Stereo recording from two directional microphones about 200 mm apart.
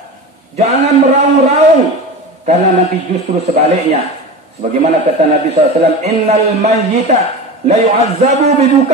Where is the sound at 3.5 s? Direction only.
30° right (ahead or behind).